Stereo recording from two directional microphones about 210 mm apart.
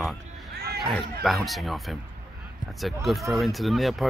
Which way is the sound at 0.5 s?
50° right (ahead or behind).